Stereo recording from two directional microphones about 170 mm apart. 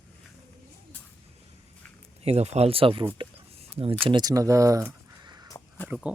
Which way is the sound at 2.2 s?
40° right (ahead or behind).